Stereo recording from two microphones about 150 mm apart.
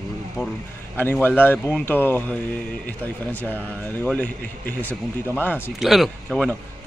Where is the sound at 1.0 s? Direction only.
15° left (ahead or behind).